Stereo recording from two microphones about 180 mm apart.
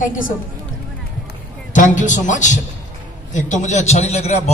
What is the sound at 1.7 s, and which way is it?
A man's voice, 45° left (ahead or behind).